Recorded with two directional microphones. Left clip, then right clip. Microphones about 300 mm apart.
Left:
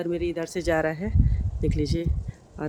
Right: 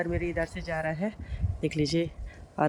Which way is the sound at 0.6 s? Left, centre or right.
Left.